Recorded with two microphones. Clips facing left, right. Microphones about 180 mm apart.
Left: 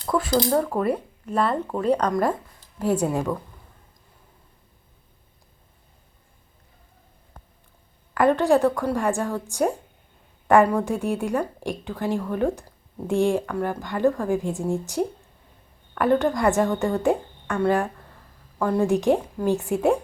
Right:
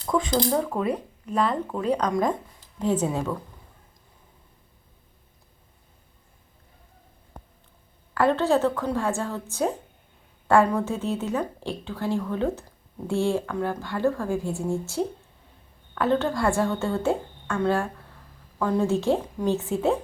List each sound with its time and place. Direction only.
0.0 s speech: 5° left (ahead or behind)
8.1 s speech: 15° left (ahead or behind)